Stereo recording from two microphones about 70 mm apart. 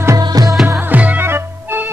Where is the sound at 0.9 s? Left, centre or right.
Right.